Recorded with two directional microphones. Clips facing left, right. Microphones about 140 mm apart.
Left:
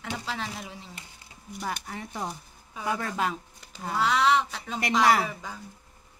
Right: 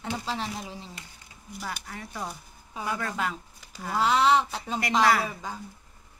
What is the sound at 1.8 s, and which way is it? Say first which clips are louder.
Speech: left 2 dB; 25° left (ahead or behind).